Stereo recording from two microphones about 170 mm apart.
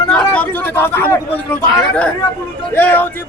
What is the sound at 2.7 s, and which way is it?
Speech, 10° left (ahead or behind).